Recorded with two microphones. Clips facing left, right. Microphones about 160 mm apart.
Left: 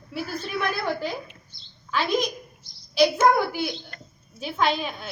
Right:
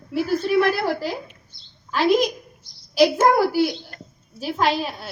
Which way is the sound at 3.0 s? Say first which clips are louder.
Right 3 dB; 40° right (ahead or behind).